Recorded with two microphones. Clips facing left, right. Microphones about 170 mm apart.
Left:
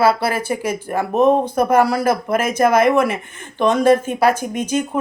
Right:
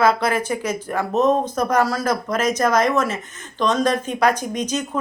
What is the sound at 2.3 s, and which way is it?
Speech, 60° left (ahead or behind).